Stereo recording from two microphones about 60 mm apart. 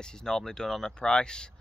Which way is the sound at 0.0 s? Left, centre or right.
Centre.